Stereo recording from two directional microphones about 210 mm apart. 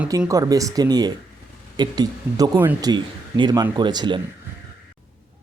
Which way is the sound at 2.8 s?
20° right (ahead or behind).